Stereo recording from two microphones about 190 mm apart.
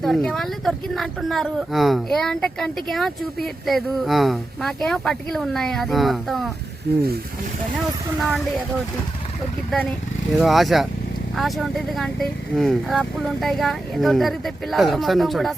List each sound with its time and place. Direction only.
0.0 s speech: centre (ahead or behind)
6.9 s speech: 55° right (ahead or behind)
10.3 s speech: centre (ahead or behind)